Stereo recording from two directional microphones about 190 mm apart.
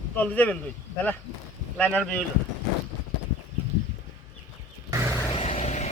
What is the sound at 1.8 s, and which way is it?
Speech, 5° left (ahead or behind).